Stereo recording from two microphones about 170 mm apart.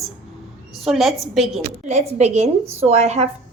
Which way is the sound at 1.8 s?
40° right (ahead or behind).